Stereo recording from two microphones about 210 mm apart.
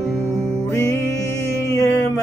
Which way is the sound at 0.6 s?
15° left (ahead or behind).